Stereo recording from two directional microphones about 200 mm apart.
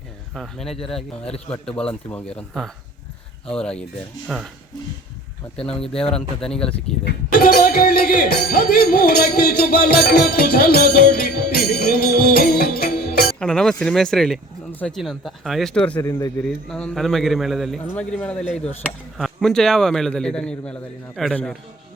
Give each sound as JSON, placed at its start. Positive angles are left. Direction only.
{"t": 0.3, "sound": "speech", "side_deg": 0}
{"t": 5.6, "sound": "speech", "side_deg": 5}
{"t": 7.5, "sound": "music", "side_deg": 45}
{"t": 13.4, "sound": "speech", "side_deg": 5}
{"t": 16.0, "sound": "speech", "side_deg": 15}
{"t": 16.4, "sound": "speech", "side_deg": 5}